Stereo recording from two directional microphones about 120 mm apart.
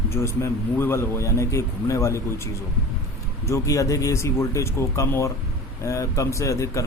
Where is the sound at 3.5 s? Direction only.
25° left (ahead or behind).